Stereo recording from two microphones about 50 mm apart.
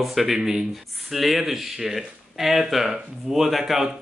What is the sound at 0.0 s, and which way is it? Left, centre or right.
Speech, centre.